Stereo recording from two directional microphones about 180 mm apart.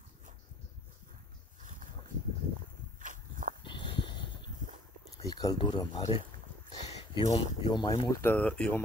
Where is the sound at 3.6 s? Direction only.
25° left (ahead or behind).